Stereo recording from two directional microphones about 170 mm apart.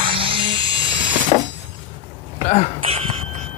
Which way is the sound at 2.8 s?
35° right (ahead or behind).